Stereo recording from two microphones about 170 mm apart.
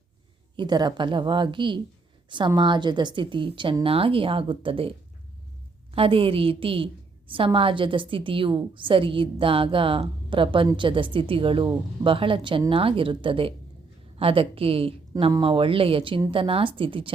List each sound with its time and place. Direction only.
0.5 s a woman's voice: 25° right (ahead or behind)